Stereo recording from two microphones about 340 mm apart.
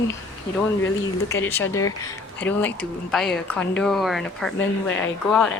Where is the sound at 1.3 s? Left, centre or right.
Centre.